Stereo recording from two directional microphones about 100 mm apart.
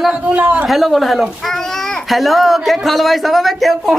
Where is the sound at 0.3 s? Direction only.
15° right (ahead or behind).